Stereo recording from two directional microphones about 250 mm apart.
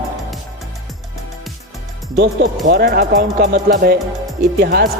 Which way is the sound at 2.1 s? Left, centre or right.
Right.